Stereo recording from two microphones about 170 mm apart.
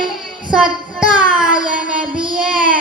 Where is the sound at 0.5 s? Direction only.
5° right (ahead or behind).